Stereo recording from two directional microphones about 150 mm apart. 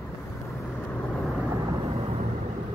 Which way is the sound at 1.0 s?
10° left (ahead or behind).